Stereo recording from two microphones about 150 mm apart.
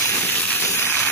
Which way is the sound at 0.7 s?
15° left (ahead or behind).